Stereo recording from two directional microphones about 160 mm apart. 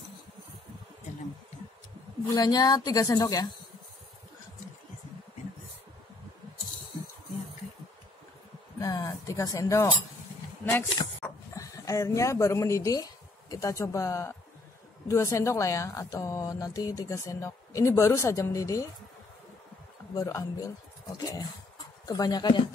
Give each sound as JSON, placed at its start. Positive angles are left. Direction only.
{"t": 2.3, "sound": "speech", "side_deg": 25}
{"t": 8.7, "sound": "a sound", "side_deg": 20}
{"t": 10.6, "sound": "speech", "side_deg": 15}
{"t": 11.2, "sound": "dog", "side_deg": 5}
{"t": 11.5, "sound": "speech", "side_deg": 20}
{"t": 20.2, "sound": "speech", "side_deg": 20}